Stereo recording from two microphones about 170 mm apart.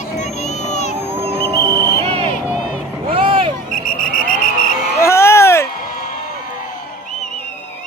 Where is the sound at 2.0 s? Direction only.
35° right (ahead or behind).